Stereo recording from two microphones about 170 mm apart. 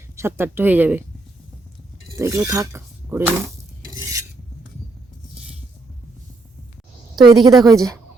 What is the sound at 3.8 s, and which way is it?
Stir, 20° right (ahead or behind).